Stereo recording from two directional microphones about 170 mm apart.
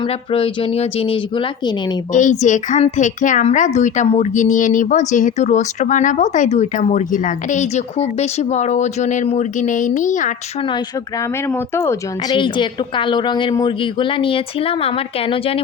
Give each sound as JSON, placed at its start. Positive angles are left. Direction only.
{"t": 0.3, "sound": "a woman's voice", "side_deg": 35}
{"t": 2.1, "sound": "a woman's voice", "side_deg": 45}
{"t": 11.4, "sound": "speech", "side_deg": 15}
{"t": 12.4, "sound": "a woman's voice", "side_deg": 30}